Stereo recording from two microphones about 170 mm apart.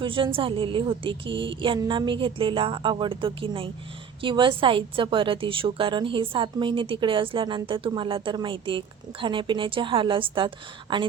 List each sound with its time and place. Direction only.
0.0 s a woman's voice: 30° right (ahead or behind)